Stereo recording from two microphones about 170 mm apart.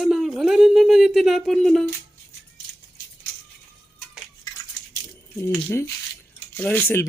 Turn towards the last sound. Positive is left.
turn(degrees=10)  # may be behind; listen again after turning